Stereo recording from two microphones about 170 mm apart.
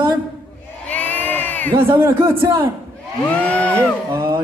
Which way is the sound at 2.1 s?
30° right (ahead or behind).